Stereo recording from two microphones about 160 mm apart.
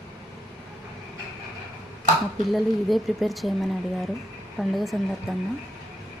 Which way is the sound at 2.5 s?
Centre (ahead or behind).